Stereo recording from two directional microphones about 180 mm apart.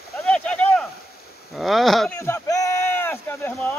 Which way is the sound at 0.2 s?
5° left (ahead or behind).